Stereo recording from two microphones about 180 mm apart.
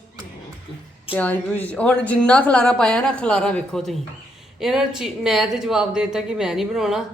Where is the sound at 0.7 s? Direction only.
30° left (ahead or behind).